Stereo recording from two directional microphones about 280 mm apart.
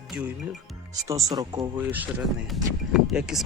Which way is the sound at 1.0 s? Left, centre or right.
Centre.